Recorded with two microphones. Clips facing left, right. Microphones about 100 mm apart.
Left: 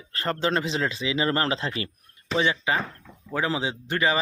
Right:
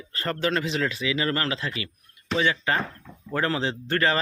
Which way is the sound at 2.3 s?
20° left (ahead or behind).